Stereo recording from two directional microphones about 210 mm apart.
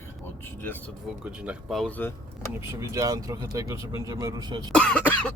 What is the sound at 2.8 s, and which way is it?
Speech, 15° right (ahead or behind).